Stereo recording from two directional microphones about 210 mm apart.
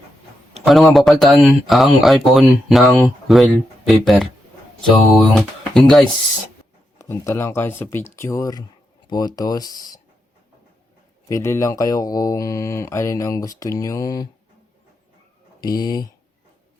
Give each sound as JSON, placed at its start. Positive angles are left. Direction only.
{"t": 0.6, "sound": "speech", "side_deg": 0}
{"t": 2.8, "sound": "speech", "side_deg": 10}
{"t": 3.2, "sound": "speech", "side_deg": 0}
{"t": 7.0, "sound": "speech", "side_deg": 10}
{"t": 11.3, "sound": "speech", "side_deg": 15}
{"t": 15.6, "sound": "speech", "side_deg": 20}